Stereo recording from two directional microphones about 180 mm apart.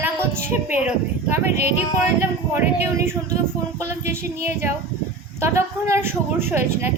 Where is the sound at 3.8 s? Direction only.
15° right (ahead or behind).